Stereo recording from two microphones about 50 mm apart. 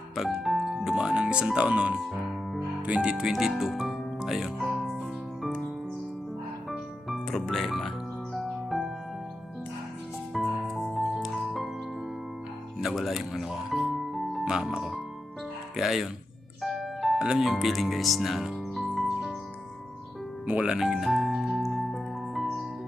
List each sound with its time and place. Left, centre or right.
0.2 s speech: centre
0.9 s speech: centre
3.3 s speech: centre
4.8 s music: centre
6.7 s music: centre
10.3 s music: centre
12.8 s music: centre
14.4 s speech: centre
15.7 s speech: centre
16.6 s music: centre
17.2 s speech: centre
17.4 s speech: centre
21.0 s music: centre